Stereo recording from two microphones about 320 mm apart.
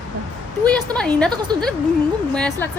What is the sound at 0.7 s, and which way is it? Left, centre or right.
Speech, centre.